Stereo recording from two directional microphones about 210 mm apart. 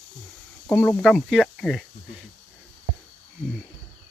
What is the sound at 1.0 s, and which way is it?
Speech, centre (ahead or behind).